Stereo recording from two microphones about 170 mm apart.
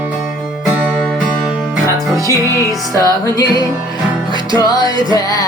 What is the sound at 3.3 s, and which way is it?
Speech, 20° left (ahead or behind).